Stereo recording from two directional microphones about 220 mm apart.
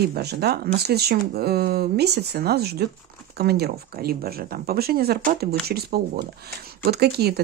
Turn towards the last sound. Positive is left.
turn(degrees=-45)  # may be behind; listen again after turning